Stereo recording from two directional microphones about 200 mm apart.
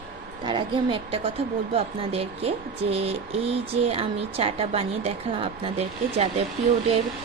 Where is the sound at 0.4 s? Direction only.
25° right (ahead or behind).